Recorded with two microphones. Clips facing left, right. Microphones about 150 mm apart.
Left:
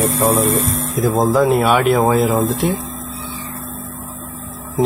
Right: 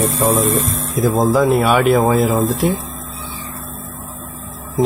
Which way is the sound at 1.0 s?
Centre (ahead or behind).